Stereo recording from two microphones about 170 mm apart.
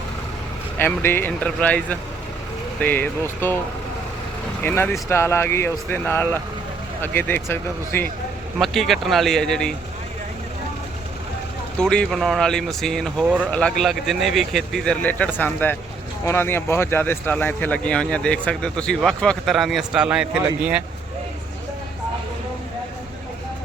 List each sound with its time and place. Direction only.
0.8 s speech: 10° left (ahead or behind)
4.6 s speech: 15° left (ahead or behind)
8.5 s speech: centre (ahead or behind)
11.8 s speech: 5° left (ahead or behind)